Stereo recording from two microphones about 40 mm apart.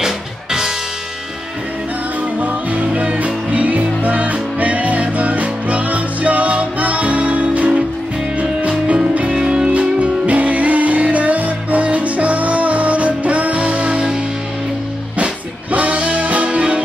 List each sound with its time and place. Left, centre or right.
0.0 s music: centre
2.4 s music: right
3.2 s music: right
9.3 s music: centre
9.7 s music: right
15.7 s music: right